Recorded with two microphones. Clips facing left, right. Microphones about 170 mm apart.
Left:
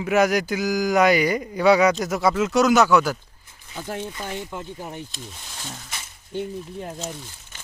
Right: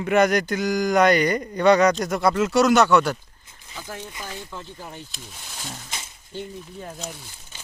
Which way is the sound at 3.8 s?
25° left (ahead or behind).